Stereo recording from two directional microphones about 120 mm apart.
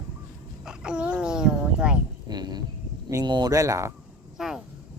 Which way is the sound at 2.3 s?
35° right (ahead or behind).